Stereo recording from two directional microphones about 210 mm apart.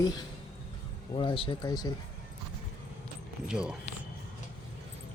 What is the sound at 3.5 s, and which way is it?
Speech, 5° right (ahead or behind).